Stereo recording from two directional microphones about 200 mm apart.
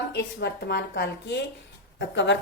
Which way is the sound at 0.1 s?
55° left (ahead or behind).